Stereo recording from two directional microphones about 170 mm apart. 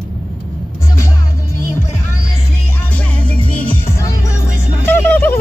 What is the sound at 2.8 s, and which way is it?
Music, 10° left (ahead or behind).